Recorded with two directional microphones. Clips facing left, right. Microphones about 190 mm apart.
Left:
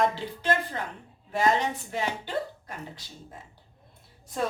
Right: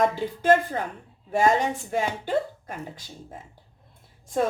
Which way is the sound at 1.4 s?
45° right (ahead or behind).